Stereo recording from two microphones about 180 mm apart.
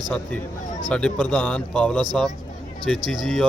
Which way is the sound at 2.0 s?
25° right (ahead or behind).